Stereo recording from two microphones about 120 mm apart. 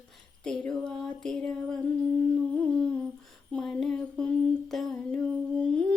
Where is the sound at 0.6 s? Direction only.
5° left (ahead or behind).